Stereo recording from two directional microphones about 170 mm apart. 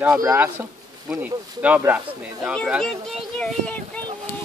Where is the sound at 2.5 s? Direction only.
Centre (ahead or behind).